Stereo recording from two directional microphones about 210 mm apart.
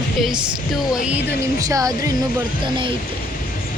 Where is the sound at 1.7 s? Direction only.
15° right (ahead or behind).